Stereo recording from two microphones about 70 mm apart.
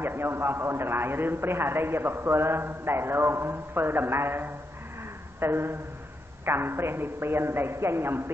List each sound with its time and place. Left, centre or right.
0.0 s a man's voice: right